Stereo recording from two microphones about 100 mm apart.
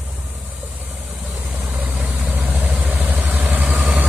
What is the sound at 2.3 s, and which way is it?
Vehicle, 15° right (ahead or behind).